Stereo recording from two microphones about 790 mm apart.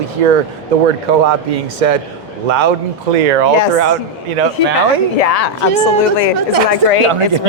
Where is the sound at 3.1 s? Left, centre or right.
Right.